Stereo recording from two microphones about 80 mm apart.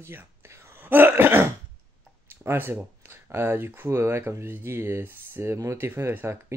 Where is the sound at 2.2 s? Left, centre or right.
Right.